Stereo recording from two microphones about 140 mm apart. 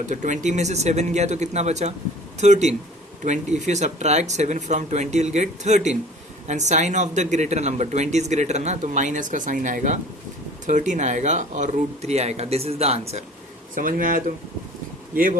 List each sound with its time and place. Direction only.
0.0 s speech: 60° right (ahead or behind)
13.7 s speech: 80° right